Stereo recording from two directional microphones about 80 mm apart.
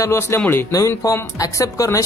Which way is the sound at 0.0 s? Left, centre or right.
Left.